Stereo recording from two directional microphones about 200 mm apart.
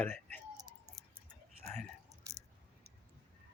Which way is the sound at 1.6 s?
5° left (ahead or behind).